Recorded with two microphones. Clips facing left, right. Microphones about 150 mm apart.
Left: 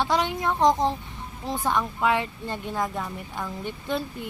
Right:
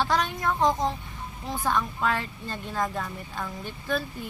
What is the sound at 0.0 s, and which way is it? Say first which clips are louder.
Speech: left 1 dB; 20° left (ahead or behind).